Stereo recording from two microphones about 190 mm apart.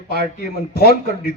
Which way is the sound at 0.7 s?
55° left (ahead or behind).